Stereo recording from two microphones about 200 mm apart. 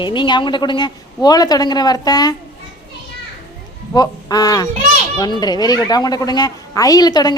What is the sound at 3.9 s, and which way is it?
A woman's voice, 20° left (ahead or behind).